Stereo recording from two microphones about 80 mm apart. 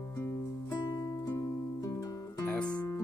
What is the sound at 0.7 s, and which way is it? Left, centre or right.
Music, left.